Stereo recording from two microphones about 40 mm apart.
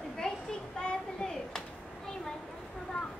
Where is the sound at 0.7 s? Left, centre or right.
Centre.